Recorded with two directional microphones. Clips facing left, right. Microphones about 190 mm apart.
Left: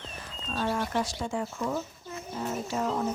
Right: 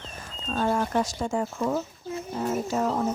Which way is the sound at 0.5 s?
45° right (ahead or behind).